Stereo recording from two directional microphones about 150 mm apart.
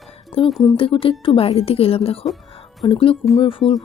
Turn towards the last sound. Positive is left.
turn(degrees=35)  # may be behind; listen again after turning